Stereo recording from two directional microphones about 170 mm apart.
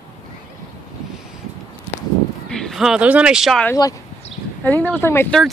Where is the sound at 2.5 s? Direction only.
Centre (ahead or behind).